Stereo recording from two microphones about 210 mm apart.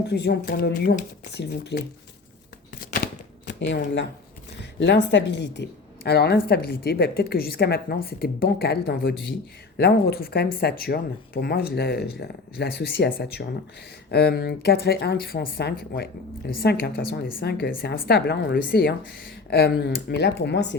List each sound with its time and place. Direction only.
0.1 s a woman's voice: 50° left (ahead or behind)
2.8 s typewriter: 45° left (ahead or behind)
4.8 s a woman's voice: 60° left (ahead or behind)